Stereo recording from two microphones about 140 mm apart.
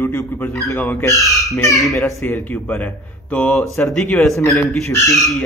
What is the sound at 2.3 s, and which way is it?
A man's voice, 15° left (ahead or behind).